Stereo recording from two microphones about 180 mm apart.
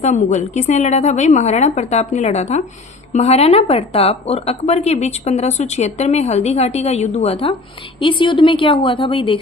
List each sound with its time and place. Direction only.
0.0 s a woman's voice: 40° left (ahead or behind)